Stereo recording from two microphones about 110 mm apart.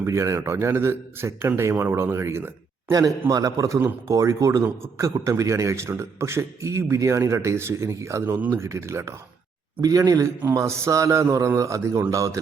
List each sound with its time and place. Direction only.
0.0 s a man's voice: 25° right (ahead or behind)